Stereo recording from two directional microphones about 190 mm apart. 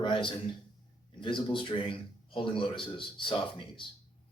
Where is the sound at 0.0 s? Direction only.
25° left (ahead or behind).